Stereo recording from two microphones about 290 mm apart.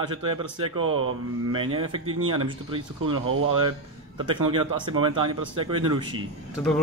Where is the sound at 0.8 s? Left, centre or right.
Right.